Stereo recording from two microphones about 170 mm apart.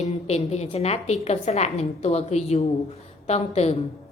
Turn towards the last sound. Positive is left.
turn(degrees=40)  # may be behind; listen again after turning